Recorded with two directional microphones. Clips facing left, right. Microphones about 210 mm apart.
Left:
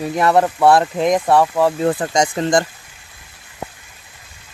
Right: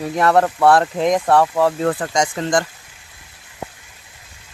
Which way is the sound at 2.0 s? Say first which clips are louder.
Left 2 dB; 25° left (ahead or behind).